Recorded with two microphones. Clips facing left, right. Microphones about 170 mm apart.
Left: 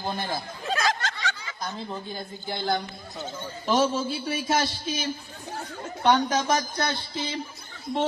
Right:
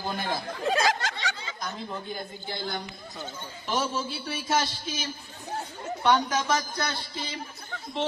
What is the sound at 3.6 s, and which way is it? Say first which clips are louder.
Speech: left 6 dB; 45° left (ahead or behind).